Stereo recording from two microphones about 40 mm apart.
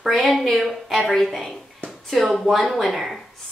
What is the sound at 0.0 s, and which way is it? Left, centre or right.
A woman's voice, centre.